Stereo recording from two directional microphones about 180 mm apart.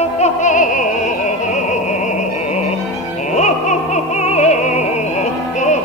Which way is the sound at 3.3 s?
40° left (ahead or behind).